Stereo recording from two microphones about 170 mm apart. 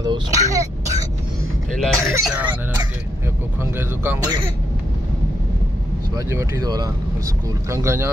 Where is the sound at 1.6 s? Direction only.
5° left (ahead or behind).